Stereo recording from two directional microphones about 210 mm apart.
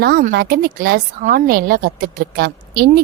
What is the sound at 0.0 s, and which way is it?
A woman's voice, 45° right (ahead or behind).